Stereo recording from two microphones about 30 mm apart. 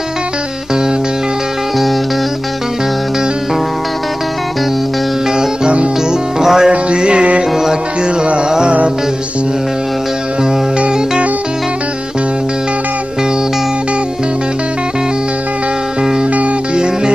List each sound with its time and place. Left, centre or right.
6.4 s music: centre
7.0 s music: right